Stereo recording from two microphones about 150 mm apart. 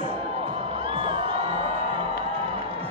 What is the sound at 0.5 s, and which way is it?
Music, 40° right (ahead or behind).